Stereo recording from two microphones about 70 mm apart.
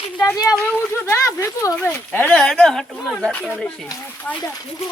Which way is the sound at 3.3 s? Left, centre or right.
Centre.